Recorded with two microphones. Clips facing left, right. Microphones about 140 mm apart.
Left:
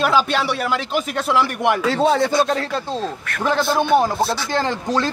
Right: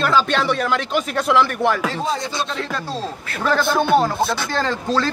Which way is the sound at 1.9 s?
80° left.